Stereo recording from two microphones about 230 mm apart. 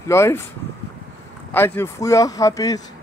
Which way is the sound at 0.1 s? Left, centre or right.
Centre.